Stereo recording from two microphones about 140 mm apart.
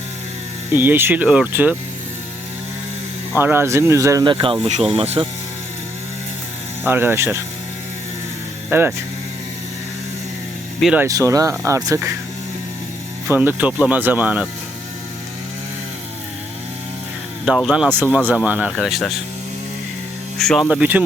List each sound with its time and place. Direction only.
0.7 s speech: 15° right (ahead or behind)
3.3 s speech: 15° right (ahead or behind)
4.3 s speech: 35° right (ahead or behind)
6.8 s speech: 15° right (ahead or behind)
8.7 s speech: 15° right (ahead or behind)
10.9 s speech: 20° right (ahead or behind)
13.2 s speech: 15° right (ahead or behind)
17.7 s speech: 5° right (ahead or behind)
20.4 s speech: 5° left (ahead or behind)
20.7 s speech: 10° right (ahead or behind)